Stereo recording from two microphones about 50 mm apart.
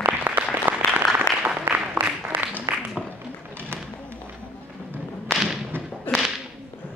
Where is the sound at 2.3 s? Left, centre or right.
Right.